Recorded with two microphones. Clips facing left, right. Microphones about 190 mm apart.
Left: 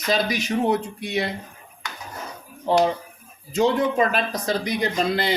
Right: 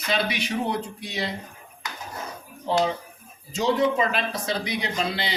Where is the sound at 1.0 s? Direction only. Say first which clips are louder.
Left 5 dB; 60° left (ahead or behind).